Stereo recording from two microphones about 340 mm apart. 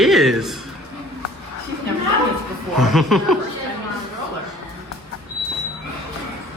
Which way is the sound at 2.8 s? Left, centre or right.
Centre.